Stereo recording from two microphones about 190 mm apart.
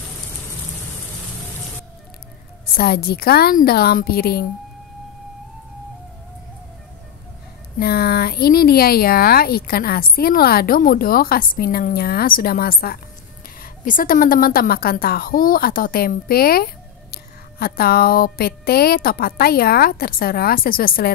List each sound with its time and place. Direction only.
2.6 s speech: 55° left (ahead or behind)
7.8 s speech: 55° left (ahead or behind)